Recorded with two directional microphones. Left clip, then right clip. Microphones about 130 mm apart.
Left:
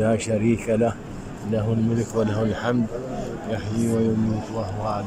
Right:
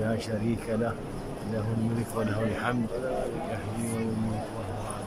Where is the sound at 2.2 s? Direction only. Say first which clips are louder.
Left 7 dB; 25° left (ahead or behind).